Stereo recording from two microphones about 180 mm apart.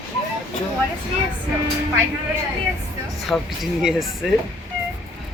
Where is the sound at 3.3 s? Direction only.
Centre (ahead or behind).